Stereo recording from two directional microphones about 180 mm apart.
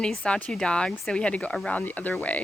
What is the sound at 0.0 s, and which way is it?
Speech, 5° left (ahead or behind).